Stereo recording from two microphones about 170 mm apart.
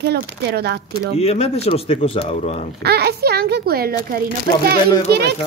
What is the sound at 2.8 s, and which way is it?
Speech, 70° right (ahead or behind).